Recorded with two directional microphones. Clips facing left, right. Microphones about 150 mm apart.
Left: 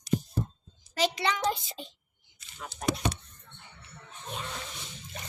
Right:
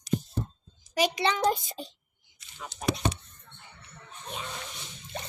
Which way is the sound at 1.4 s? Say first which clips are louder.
Right 4 dB; 45° right (ahead or behind).